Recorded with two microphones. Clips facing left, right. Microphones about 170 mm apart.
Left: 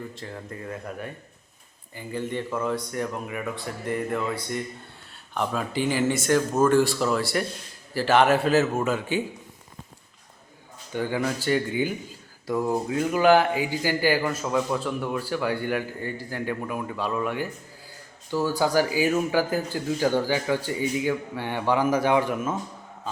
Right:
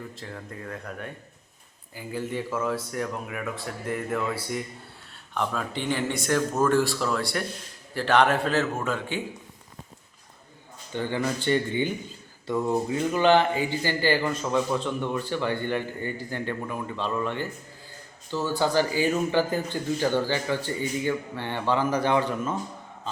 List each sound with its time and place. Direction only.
0.1 s speech: centre (ahead or behind)
10.9 s speech: 10° left (ahead or behind)